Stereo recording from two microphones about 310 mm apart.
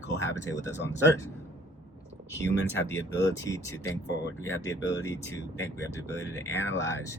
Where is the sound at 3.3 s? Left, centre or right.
Centre.